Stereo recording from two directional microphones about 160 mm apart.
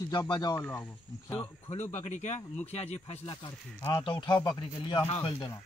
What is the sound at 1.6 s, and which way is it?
A man's voice, 45° left (ahead or behind).